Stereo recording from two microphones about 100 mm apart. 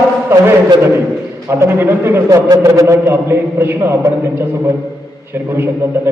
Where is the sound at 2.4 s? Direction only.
35° right (ahead or behind).